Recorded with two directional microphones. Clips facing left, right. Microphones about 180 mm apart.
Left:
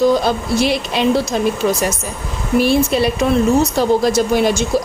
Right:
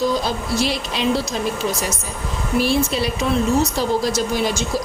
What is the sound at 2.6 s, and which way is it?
A woman's voice, 55° left (ahead or behind).